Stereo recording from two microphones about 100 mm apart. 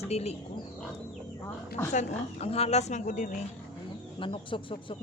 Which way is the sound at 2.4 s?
90° left.